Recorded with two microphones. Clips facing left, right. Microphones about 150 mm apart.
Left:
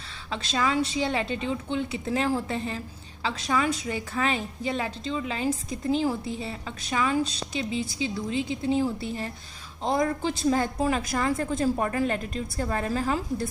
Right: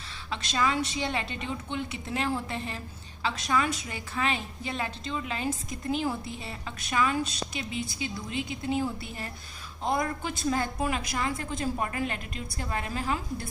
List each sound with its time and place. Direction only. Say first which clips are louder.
0.3 s a woman's voice: left 2 dB; 30° left (ahead or behind)